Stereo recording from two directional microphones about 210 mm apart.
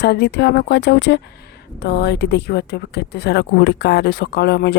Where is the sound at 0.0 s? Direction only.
55° left (ahead or behind).